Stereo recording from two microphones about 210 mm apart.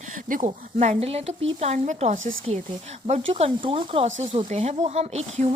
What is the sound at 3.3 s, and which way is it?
A woman's voice, 25° right (ahead or behind).